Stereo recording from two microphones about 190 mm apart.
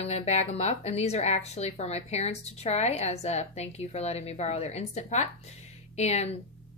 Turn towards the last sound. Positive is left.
turn(degrees=35)  # may be behind; listen again after turning